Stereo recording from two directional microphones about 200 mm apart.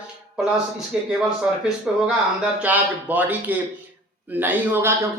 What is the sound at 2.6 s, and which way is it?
Speech, 10° right (ahead or behind).